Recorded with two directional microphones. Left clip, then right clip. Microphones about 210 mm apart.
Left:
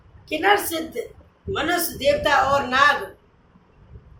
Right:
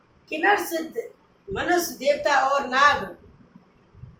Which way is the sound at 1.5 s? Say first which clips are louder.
Even; 35° left (ahead or behind).